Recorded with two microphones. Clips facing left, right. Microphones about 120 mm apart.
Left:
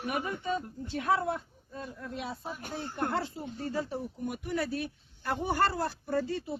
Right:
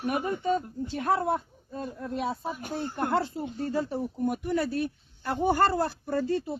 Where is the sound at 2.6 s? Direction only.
5° right (ahead or behind).